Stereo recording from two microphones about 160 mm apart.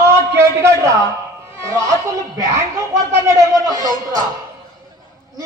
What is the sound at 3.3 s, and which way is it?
Honk, 20° right (ahead or behind).